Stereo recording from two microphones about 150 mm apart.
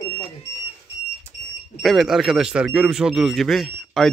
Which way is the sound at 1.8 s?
Centre (ahead or behind).